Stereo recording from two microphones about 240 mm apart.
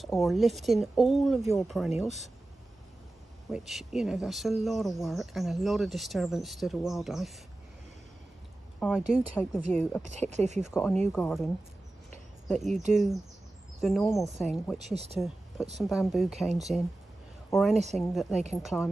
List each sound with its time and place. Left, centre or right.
0.0 s speech: centre
3.5 s speech: centre
8.7 s speech: centre
10.0 s speech: right
10.7 s speech: centre
15.1 s a sound: centre
15.8 s a woman's voice: centre